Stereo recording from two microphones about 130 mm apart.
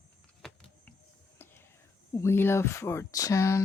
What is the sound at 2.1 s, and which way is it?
Speech, 20° left (ahead or behind).